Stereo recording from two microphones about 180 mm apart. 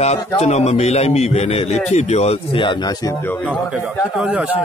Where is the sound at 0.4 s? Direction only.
40° left (ahead or behind).